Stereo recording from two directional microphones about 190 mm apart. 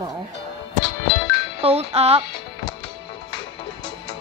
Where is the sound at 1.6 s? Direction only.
35° right (ahead or behind).